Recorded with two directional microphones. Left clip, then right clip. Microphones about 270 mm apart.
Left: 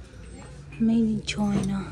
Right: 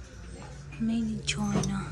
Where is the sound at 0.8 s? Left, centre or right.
Centre.